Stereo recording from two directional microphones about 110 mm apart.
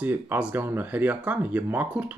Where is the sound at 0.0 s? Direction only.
15° right (ahead or behind).